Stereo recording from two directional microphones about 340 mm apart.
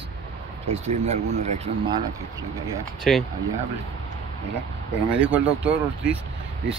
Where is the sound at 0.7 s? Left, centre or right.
Centre.